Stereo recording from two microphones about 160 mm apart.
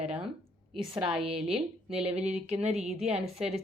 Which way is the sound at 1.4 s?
40° right (ahead or behind).